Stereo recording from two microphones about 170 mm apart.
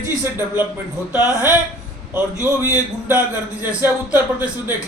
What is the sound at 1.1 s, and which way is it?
Speech, 20° left (ahead or behind).